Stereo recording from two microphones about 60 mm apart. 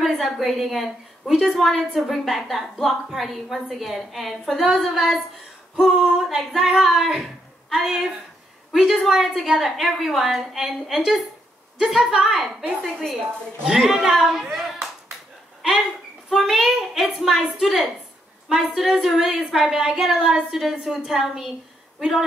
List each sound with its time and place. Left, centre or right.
0.0 s a woman's voice: centre
4.6 s a woman's voice: centre
13.7 s speech: centre
16.3 s a woman's voice: centre